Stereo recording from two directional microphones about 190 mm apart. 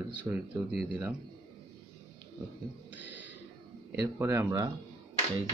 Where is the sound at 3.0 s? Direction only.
70° left (ahead or behind).